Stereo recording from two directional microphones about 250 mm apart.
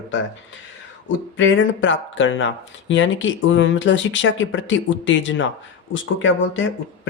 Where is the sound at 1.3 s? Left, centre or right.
Left.